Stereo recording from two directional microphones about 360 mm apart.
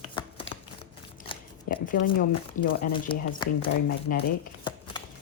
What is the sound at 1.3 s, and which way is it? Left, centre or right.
Shuffling cards, left.